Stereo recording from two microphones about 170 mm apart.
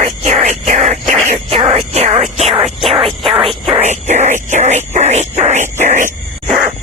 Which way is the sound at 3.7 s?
45° right (ahead or behind).